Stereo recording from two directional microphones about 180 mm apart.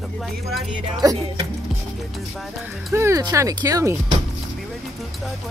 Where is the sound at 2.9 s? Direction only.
15° right (ahead or behind).